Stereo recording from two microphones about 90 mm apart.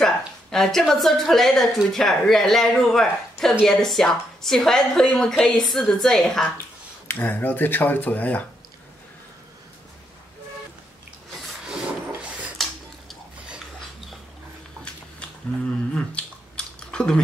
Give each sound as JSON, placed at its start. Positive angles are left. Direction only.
{"t": 0.0, "sound": "a woman's voice", "side_deg": 5}
{"t": 7.1, "sound": "speech", "side_deg": 20}
{"t": 11.6, "sound": "rub", "side_deg": -10}
{"t": 15.9, "sound": "chewing", "side_deg": 10}